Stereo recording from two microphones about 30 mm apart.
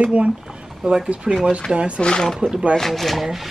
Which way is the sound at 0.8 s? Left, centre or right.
Right.